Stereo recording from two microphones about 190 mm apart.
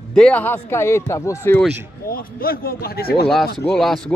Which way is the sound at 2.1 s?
50° left (ahead or behind).